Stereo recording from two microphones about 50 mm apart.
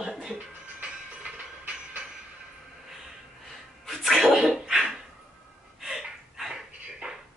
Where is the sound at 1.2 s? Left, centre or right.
Right.